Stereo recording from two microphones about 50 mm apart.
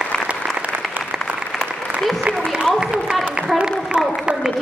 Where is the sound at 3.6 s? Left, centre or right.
Centre.